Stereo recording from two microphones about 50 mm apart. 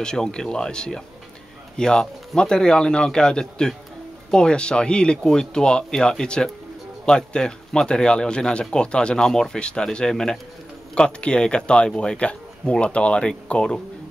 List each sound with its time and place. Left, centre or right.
0.0 s speech: centre